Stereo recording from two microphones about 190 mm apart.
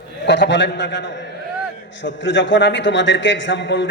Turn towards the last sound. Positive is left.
turn(degrees=70)  # may be behind; listen again after turning